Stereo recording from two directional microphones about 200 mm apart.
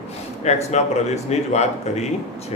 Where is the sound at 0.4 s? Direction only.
35° left (ahead or behind).